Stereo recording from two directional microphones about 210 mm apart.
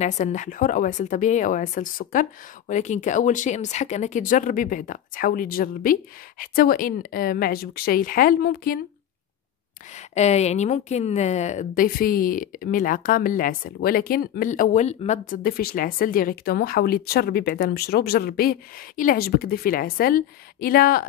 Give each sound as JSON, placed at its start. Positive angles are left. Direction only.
{"t": 0.0, "sound": "speech", "side_deg": 35}
{"t": 9.9, "sound": "speech", "side_deg": 30}